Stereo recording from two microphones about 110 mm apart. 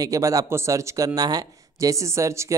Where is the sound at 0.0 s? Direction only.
30° right (ahead or behind).